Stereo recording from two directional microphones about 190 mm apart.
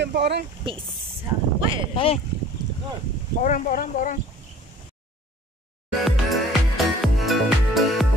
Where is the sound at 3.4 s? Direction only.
45° left (ahead or behind).